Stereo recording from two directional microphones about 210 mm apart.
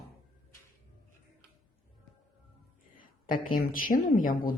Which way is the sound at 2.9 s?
40° left (ahead or behind).